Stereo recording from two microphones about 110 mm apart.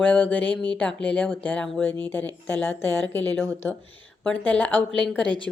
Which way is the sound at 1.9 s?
20° left (ahead or behind).